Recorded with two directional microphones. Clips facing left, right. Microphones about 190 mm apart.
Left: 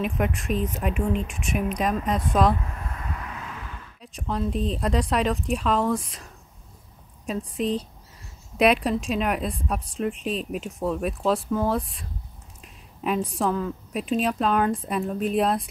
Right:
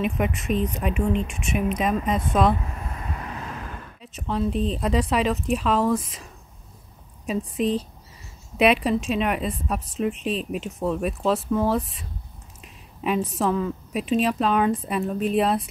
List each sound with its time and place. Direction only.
0.0 s a woman's voice: centre (ahead or behind)
2.6 s vehicle: 15° right (ahead or behind); by 3.9 s 45° right (ahead or behind)
4.0 s a woman's voice: centre (ahead or behind)
8.5 s a woman's voice: centre (ahead or behind)